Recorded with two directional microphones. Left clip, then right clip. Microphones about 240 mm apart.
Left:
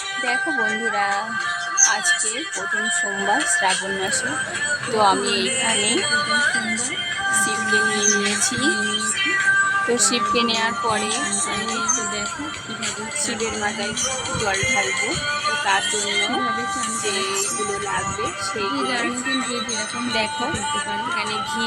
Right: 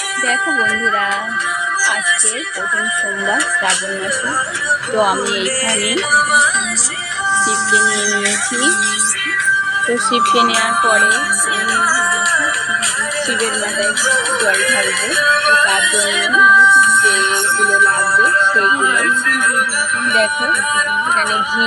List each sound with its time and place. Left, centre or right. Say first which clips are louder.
6.1 s music: right 12 dB; right
10.2 s speech: right 11 dB; right
10.8 s music: right 10 dB; centre
14.1 s music: right 10 dB; centre